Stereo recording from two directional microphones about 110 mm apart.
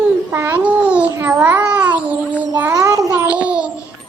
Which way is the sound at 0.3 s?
20° right (ahead or behind).